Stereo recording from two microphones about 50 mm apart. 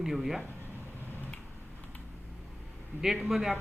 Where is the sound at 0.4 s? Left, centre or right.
Right.